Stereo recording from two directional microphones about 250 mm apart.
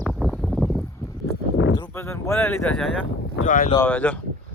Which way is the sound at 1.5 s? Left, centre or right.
Left.